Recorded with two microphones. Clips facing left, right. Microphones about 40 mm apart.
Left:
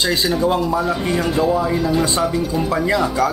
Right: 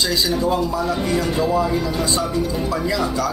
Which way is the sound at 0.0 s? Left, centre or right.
Left.